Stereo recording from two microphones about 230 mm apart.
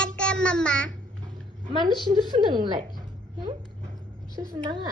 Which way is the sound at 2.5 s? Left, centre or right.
Centre.